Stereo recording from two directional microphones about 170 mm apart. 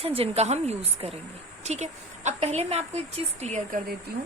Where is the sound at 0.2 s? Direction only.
40° right (ahead or behind).